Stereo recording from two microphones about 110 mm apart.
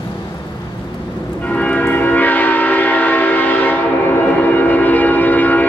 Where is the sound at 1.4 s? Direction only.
15° left (ahead or behind).